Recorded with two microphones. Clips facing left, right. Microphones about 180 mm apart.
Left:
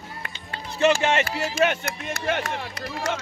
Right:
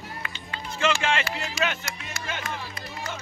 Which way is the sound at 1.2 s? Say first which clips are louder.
Left 6 dB; 45° left (ahead or behind).